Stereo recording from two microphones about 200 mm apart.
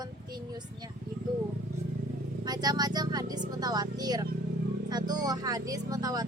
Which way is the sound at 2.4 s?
20° right (ahead or behind).